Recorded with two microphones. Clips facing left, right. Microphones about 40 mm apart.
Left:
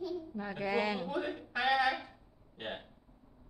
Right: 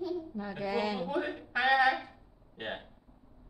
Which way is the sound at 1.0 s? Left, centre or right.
Centre.